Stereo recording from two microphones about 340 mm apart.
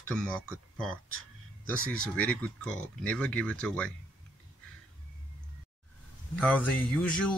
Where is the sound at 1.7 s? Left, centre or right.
Right.